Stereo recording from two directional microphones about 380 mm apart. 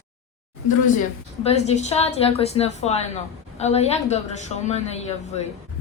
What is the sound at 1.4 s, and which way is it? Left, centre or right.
A woman's voice, centre.